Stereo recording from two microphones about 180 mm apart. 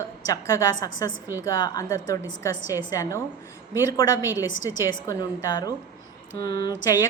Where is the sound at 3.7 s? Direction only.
20° left (ahead or behind).